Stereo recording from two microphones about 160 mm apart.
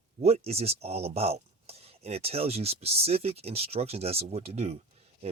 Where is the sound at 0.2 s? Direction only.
40° right (ahead or behind).